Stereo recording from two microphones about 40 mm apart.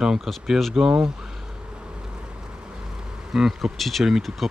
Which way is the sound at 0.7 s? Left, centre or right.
Centre.